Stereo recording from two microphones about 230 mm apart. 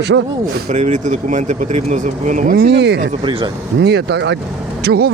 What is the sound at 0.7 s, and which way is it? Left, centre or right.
Speech, right.